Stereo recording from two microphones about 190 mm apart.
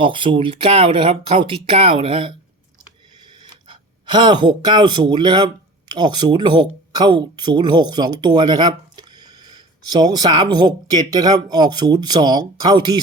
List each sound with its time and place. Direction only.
0.0 s speech: 25° right (ahead or behind)
3.2 s a sound: 25° right (ahead or behind)
5.9 s speech: 25° right (ahead or behind)